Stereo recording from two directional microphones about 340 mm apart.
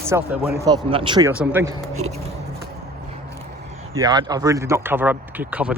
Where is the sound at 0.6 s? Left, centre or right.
Centre.